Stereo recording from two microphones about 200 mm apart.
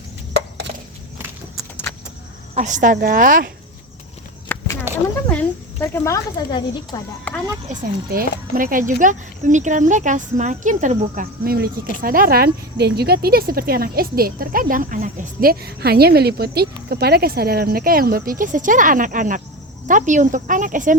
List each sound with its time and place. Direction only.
0.3 s chop: 55° right (ahead or behind)
2.6 s speech: 40° right (ahead or behind)
4.5 s a sound: 10° left (ahead or behind)
5.8 s speech: 10° left (ahead or behind)
7.3 s a sound: 5° left (ahead or behind)
7.7 s speech: 45° right (ahead or behind)